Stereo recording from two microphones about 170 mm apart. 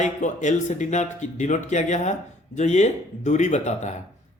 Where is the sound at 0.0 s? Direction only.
45° left (ahead or behind).